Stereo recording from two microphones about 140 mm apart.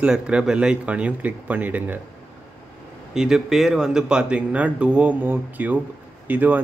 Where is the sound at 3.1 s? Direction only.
5° right (ahead or behind).